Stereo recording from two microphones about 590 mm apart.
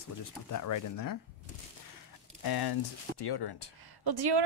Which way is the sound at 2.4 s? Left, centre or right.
Left.